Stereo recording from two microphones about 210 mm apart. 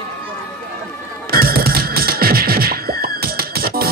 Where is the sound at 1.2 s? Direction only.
45° right (ahead or behind).